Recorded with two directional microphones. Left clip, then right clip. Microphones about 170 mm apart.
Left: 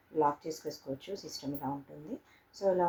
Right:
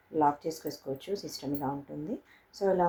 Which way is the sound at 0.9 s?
45° right (ahead or behind).